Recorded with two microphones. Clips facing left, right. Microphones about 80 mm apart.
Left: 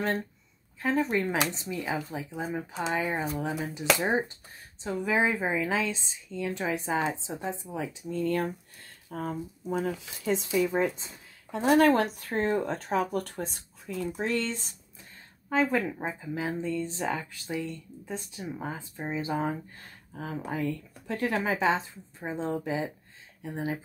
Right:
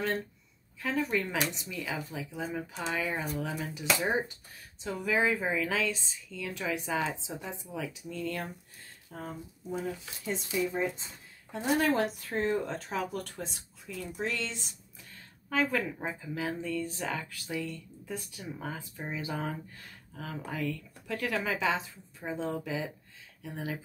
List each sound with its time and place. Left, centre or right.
0.7 s speech: left
4.8 s a woman's voice: left
8.0 s speech: left
9.1 s speech: left
11.5 s speech: left
15.5 s a woman's voice: left